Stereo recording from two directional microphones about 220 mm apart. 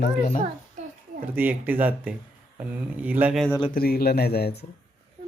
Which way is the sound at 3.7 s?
45° left (ahead or behind).